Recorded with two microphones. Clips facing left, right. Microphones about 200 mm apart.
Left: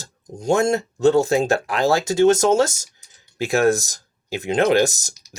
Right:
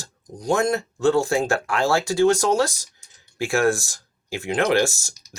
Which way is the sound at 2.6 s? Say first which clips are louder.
Left 2 dB; 45° left (ahead or behind).